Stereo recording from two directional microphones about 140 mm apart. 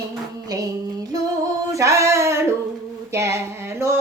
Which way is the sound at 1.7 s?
20° right (ahead or behind).